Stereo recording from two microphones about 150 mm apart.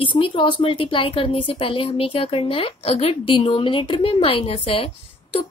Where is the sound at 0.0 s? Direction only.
35° left (ahead or behind).